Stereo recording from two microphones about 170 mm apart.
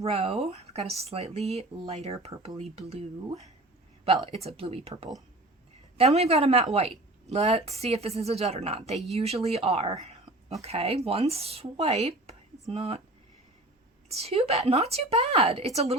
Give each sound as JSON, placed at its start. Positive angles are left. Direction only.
{"t": 0.0, "sound": "speech", "side_deg": -35}
{"t": 2.3, "sound": "speech", "side_deg": -25}
{"t": 2.6, "sound": "speech", "side_deg": -35}
{"t": 14.1, "sound": "speech", "side_deg": -35}